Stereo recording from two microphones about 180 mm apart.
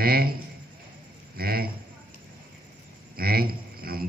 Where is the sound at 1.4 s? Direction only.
55° right (ahead or behind).